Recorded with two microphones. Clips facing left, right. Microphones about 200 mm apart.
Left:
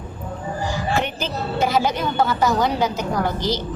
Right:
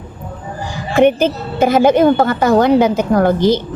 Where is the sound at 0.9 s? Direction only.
55° right (ahead or behind).